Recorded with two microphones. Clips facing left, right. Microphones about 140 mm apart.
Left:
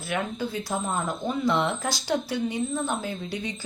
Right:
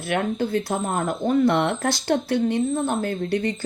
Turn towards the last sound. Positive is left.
turn(degrees=-60)  # may be behind; listen again after turning